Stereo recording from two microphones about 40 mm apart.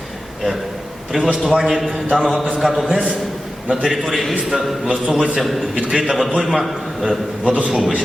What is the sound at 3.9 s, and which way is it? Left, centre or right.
Speech, centre.